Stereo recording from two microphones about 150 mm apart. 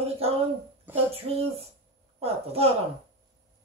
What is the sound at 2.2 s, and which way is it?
Speech, 40° right (ahead or behind).